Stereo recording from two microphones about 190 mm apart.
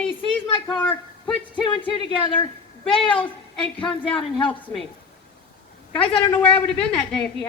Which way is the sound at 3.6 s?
5° left (ahead or behind).